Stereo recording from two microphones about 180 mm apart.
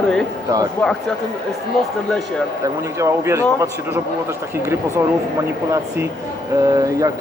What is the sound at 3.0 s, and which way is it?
Speech, 15° right (ahead or behind).